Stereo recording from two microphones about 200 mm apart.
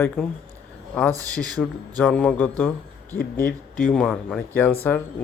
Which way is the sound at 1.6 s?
10° left (ahead or behind).